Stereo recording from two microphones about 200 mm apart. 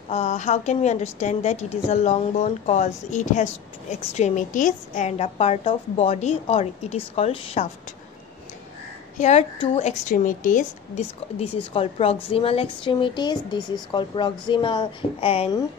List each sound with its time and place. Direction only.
0.1 s a woman's voice: 35° left (ahead or behind)
9.2 s a woman's voice: 35° left (ahead or behind)